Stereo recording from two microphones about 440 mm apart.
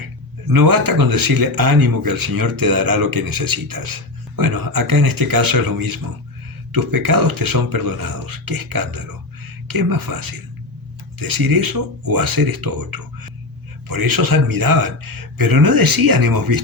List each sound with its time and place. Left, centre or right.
0.0 s speech: right